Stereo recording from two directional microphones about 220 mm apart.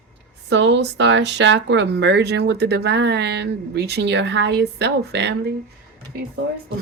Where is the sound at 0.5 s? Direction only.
55° right (ahead or behind).